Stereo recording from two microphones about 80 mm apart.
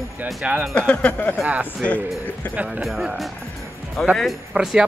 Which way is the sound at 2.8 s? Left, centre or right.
Centre.